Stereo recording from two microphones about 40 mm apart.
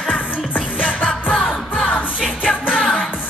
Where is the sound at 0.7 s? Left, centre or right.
Left.